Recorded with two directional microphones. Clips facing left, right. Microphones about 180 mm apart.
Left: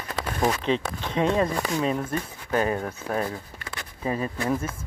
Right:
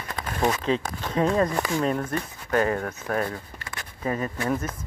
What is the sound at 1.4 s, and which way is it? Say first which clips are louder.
Speech: right 1 dB; 5° left (ahead or behind).